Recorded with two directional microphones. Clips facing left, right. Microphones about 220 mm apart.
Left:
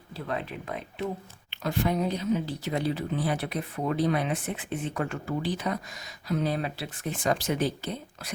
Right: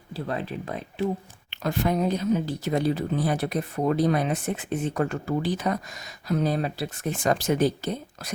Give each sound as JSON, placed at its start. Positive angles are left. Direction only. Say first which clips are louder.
{"t": 0.3, "sound": "speech", "louder": "right 2 dB", "side_deg": -35}